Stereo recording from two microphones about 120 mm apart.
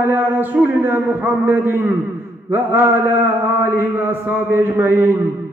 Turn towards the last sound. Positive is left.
turn(degrees=-15)  # may be behind; listen again after turning